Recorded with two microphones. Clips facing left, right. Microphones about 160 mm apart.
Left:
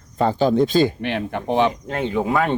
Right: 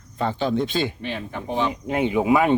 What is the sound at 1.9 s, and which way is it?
Speech, 10° right (ahead or behind).